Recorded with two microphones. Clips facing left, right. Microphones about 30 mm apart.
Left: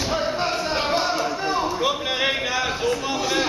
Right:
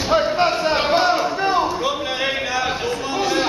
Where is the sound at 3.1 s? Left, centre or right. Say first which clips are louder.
Right 3 dB; centre.